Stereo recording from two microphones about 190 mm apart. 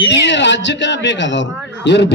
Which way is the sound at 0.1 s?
65° left (ahead or behind).